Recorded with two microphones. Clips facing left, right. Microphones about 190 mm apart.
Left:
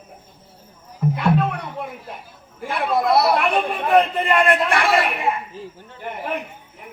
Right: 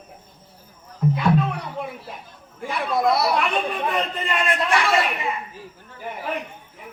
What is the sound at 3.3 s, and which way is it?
A man's voice, 55° left (ahead or behind).